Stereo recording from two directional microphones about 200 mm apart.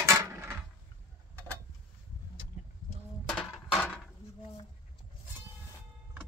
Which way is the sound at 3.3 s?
Centre (ahead or behind).